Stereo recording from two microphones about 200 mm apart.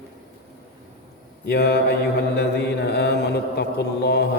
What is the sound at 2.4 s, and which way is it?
Music, 55° left (ahead or behind).